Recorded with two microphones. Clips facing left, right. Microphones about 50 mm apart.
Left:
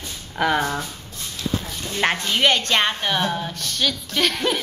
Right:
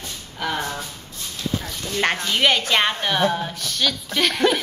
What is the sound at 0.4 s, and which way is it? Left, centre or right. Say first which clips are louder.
Speech: left 5 dB; left.